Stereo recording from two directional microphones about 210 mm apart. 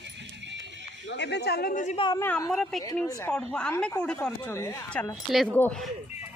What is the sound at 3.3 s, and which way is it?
Speech, 5° left (ahead or behind).